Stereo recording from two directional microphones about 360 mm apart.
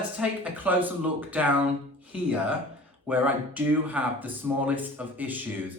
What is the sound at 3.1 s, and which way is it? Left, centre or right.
Speech, centre.